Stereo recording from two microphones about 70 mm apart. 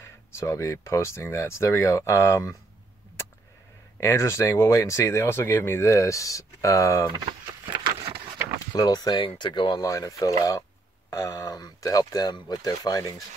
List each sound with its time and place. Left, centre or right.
0.0 s speech: left
4.0 s speech: left
8.7 s speech: left
9.8 s speech: left